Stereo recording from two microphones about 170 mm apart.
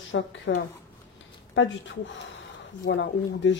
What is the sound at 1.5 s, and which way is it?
Speech, 90° left.